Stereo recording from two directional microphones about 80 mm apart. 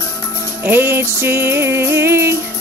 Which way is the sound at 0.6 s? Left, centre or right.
Right.